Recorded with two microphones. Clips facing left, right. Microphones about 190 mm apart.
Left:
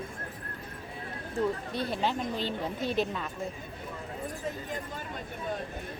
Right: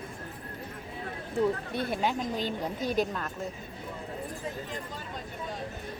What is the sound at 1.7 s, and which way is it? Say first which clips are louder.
Speech: right 1 dB; 55° right (ahead or behind).